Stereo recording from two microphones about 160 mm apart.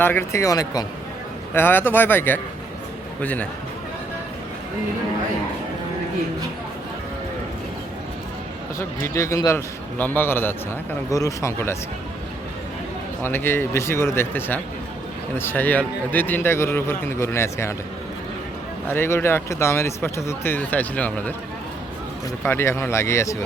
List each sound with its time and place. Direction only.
0.0 s speech: 15° left (ahead or behind)
8.8 s speech: 15° left (ahead or behind)
13.2 s speech: 15° left (ahead or behind)
18.9 s speech: 15° left (ahead or behind)
22.4 s speech: 15° left (ahead or behind)